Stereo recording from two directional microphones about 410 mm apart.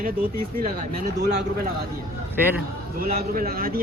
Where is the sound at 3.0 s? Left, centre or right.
Right.